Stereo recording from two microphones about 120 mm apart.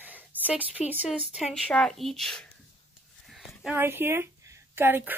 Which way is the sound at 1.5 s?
5° left (ahead or behind).